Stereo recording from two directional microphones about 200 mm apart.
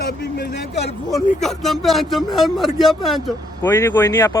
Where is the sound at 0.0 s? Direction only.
50° left (ahead or behind).